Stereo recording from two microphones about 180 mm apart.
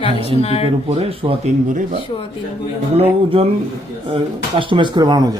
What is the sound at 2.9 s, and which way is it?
Speech, 35° right (ahead or behind).